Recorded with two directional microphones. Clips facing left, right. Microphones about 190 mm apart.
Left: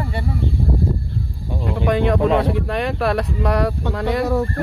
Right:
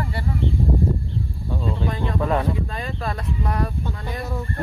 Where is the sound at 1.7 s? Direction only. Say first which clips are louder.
Left 9 dB; 75° left (ahead or behind).